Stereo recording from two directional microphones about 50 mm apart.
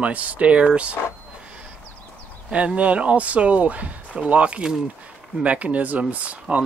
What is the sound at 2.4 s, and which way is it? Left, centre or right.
Speech, right.